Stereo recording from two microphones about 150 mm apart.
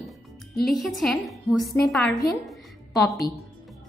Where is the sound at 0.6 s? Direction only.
Centre (ahead or behind).